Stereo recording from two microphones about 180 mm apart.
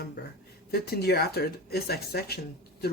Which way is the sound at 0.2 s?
65° left (ahead or behind).